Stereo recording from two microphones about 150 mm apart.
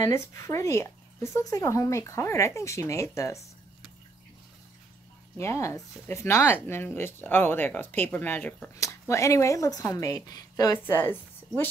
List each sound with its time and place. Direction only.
0.0 s speech: 20° left (ahead or behind)
5.4 s speech: 20° left (ahead or behind)